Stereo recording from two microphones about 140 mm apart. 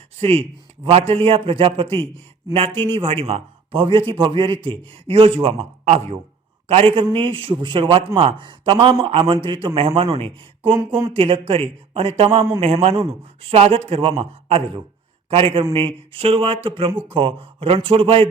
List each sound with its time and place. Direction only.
0.2 s speech: 45° right (ahead or behind)
6.7 s speech: 45° right (ahead or behind)
10.8 s speech: 20° right (ahead or behind)
11.1 s speech: 40° right (ahead or behind)